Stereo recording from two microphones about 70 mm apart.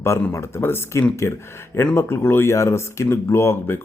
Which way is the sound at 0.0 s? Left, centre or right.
Left.